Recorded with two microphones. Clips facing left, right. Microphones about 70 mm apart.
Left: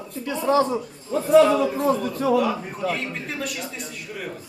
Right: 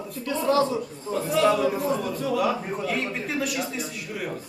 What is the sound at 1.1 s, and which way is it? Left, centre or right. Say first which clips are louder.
Speech: left 3 dB; right.